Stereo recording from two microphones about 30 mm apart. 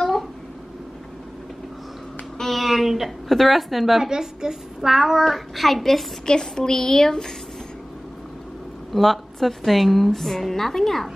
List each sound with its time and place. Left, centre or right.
2.4 s a woman's voice: centre
4.0 s a woman's voice: centre
5.1 s a child's voice: centre
6.2 s a woman's voice: left
8.9 s a woman's voice: centre